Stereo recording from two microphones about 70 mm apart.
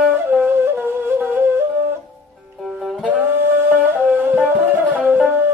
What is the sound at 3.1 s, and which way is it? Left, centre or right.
Music, right.